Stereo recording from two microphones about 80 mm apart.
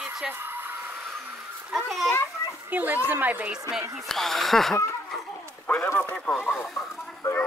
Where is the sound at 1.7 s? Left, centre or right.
Centre.